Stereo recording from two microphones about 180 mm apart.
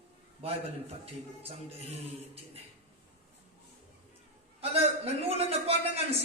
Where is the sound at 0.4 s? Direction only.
35° right (ahead or behind).